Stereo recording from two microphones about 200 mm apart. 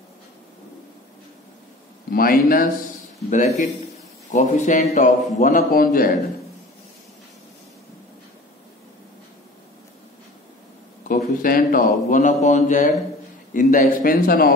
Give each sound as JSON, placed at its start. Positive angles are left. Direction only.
{"t": 2.0, "sound": "a man's voice", "side_deg": 45}
{"t": 11.1, "sound": "a man's voice", "side_deg": 45}